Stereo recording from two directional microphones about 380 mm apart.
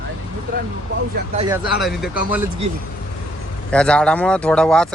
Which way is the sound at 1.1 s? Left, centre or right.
Centre.